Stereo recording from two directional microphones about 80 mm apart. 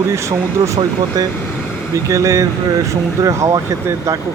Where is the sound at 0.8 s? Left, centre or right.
Right.